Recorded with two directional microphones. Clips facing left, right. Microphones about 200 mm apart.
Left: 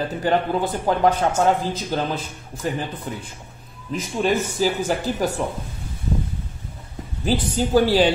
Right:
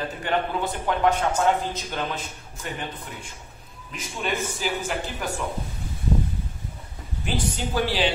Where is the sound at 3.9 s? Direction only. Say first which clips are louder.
Left 8 dB; 35° left (ahead or behind).